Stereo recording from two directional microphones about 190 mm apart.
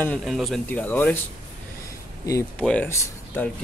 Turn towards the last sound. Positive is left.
turn(degrees=10)  # may be behind; listen again after turning